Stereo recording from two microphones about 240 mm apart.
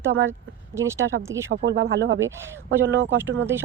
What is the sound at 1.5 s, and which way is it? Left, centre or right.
Speech, right.